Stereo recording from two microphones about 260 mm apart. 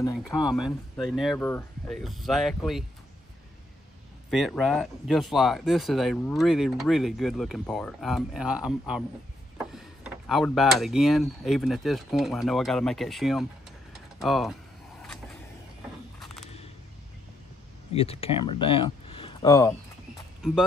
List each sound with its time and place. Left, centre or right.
0.0 s speech: centre
0.9 s speech: centre
4.3 s speech: centre
9.7 s a sound: centre
10.8 s speech: centre
13.9 s typing: centre
17.9 s speech: left